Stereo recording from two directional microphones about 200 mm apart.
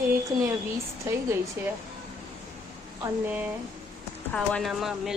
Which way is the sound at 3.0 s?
10° right (ahead or behind).